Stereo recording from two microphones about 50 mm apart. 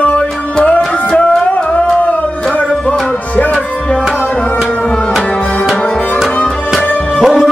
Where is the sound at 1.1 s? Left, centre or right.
Centre.